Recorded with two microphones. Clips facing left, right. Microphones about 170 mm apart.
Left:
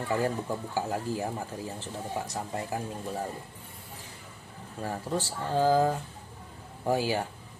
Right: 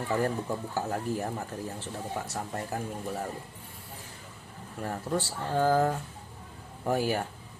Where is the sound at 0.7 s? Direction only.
10° left (ahead or behind).